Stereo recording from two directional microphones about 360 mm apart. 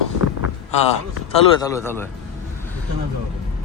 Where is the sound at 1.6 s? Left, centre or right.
Centre.